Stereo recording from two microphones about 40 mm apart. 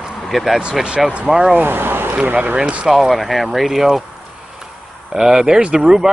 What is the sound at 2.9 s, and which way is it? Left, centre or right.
Speech, centre.